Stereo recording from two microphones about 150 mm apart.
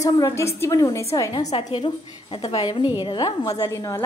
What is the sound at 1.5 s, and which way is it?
A woman's voice, 35° left (ahead or behind).